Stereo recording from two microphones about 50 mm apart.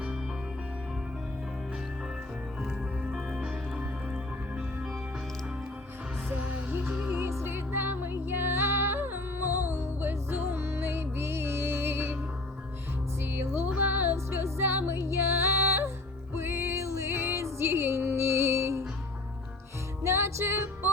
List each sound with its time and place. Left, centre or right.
3.2 s music: centre
3.8 s music: right
7.1 s music: right
7.4 s music: right
13.2 s music: right
14.7 s music: right
15.4 s female singing: right
16.3 s music: right
16.7 s music: right
17.2 s music: right
20.1 s music: right